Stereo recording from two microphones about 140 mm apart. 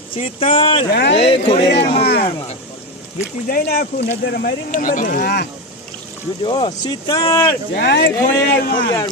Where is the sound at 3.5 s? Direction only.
90° left.